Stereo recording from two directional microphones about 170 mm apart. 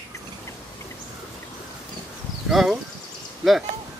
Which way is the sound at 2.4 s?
Centre (ahead or behind).